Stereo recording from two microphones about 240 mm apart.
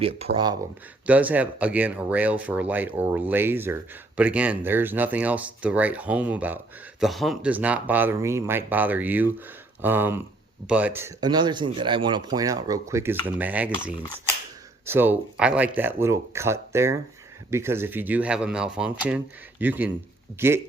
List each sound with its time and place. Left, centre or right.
0.3 s speech: right
1.0 s speech: centre
14.8 s speech: centre